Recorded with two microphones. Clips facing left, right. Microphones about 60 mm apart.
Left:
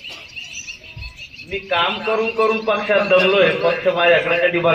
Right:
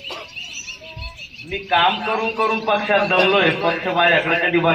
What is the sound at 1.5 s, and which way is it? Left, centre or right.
A man's voice, centre.